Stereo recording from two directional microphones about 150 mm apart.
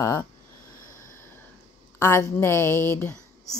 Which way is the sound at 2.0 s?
15° left (ahead or behind).